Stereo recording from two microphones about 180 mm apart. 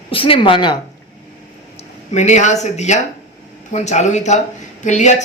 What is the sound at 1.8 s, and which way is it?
A man's voice, 40° left (ahead or behind).